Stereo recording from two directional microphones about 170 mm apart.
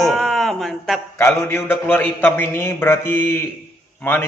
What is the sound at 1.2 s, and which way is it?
A man's voice, 15° left (ahead or behind).